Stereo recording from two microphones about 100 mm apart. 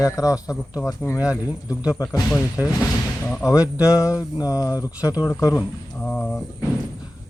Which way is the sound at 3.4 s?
35° left (ahead or behind).